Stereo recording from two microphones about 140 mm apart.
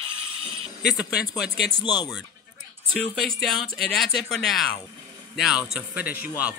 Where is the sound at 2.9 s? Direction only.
Centre (ahead or behind).